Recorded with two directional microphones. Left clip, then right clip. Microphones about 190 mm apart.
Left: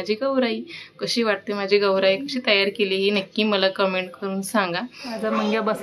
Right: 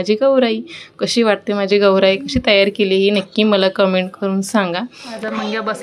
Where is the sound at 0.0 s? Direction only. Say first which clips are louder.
Right 9 dB; 30° right (ahead or behind).